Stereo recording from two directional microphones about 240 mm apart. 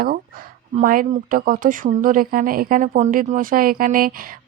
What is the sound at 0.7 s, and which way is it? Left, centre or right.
Speech, right.